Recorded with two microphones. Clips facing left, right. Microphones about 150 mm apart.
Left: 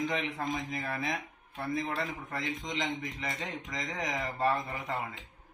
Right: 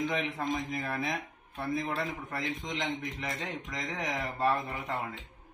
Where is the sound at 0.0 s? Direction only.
Centre (ahead or behind).